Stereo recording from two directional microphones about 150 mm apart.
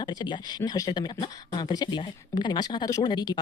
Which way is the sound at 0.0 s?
30° left (ahead or behind).